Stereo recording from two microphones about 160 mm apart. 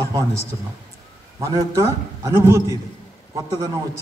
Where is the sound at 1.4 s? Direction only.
20° right (ahead or behind).